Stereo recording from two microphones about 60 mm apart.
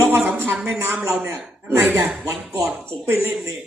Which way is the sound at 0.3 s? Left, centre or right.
Right.